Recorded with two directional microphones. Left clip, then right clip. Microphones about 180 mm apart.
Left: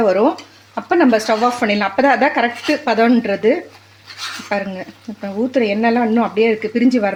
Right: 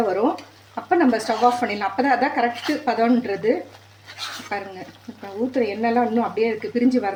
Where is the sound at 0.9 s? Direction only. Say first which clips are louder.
Left 5 dB; 50° left (ahead or behind).